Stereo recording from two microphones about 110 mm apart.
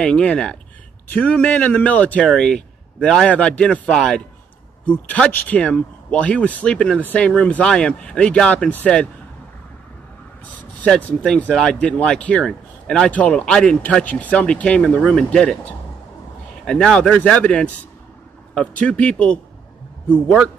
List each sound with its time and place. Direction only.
0.0 s speech: 10° left (ahead or behind)
10.5 s speech: 15° left (ahead or behind)